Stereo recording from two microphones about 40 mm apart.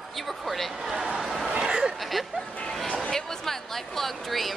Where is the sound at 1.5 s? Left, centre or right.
Centre.